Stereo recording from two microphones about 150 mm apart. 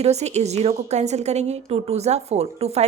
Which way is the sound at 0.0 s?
45° right (ahead or behind).